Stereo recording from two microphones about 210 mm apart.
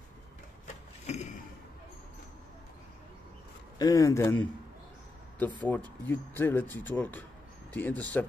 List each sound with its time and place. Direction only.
1.0 s a sound: 30° left (ahead or behind)
3.7 s speech: 15° left (ahead or behind)
5.7 s speech: 10° left (ahead or behind)